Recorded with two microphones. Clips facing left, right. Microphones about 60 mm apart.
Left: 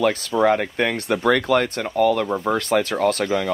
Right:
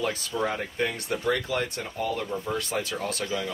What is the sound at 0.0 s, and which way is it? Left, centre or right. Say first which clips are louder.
Speech: left 10 dB; left.